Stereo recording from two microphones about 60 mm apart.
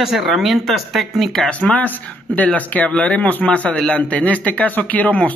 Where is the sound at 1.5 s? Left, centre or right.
Left.